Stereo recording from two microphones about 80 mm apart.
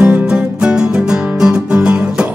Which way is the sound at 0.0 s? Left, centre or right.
Centre.